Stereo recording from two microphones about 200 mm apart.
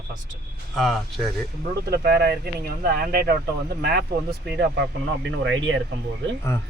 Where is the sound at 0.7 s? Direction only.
Centre (ahead or behind).